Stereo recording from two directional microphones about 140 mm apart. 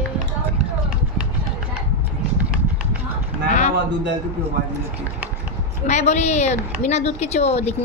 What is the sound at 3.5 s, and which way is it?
Speech, 55° left (ahead or behind).